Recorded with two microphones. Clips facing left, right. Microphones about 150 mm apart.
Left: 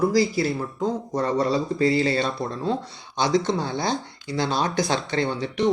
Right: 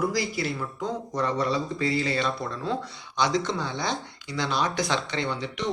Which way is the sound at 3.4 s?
40° left (ahead or behind).